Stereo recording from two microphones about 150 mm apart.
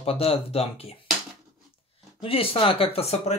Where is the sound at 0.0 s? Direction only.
40° left (ahead or behind).